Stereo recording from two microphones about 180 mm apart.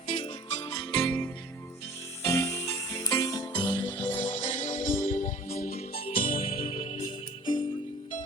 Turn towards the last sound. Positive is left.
turn(degrees=30)  # may be behind; listen again after turning